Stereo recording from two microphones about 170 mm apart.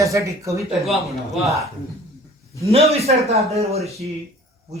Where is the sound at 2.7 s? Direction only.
35° right (ahead or behind).